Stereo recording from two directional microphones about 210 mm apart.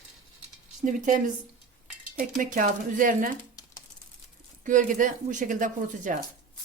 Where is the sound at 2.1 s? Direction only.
40° right (ahead or behind).